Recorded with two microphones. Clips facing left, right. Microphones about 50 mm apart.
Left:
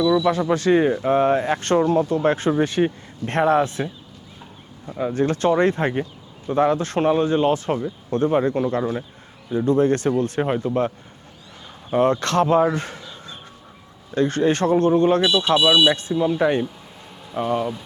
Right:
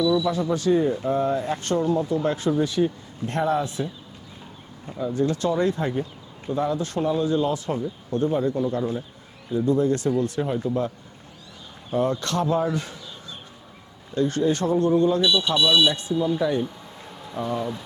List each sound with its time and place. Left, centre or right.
0.3 s speech: left
4.9 s speech: left
8.6 s speech: left
11.9 s speech: left
14.2 s speech: left
15.2 s speech: left
15.9 s speech: left
17.6 s speech: centre